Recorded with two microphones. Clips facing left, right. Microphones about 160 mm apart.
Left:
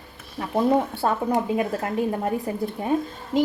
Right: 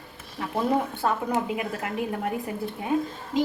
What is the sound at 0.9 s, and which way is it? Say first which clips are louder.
A woman's voice: left 3 dB; 35° left (ahead or behind).